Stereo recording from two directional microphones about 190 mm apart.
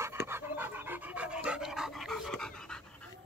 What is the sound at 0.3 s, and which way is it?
Dog, 10° right (ahead or behind).